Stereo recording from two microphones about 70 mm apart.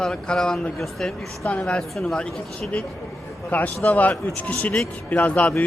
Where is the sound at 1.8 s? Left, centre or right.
Centre.